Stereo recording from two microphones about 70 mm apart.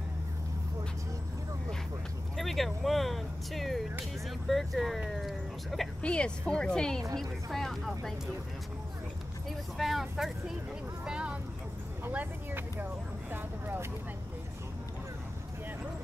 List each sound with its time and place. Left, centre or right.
2.3 s speech: centre
6.0 s speech: centre
9.5 s speech: centre
11.1 s speech: centre
12.1 s speech: right